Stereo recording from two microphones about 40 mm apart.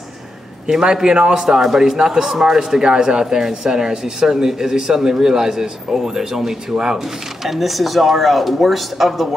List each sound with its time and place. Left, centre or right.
0.7 s a man's voice: centre
1.6 s speech: centre
2.0 s a man's voice: right
7.4 s speech: centre